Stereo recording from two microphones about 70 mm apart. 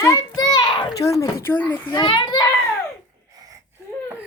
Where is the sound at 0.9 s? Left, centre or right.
Left.